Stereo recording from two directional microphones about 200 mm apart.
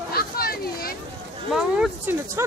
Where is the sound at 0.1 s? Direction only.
50° left (ahead or behind).